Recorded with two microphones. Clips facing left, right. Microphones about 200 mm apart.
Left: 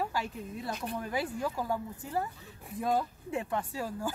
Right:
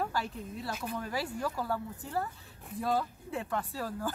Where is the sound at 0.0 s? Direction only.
10° left (ahead or behind).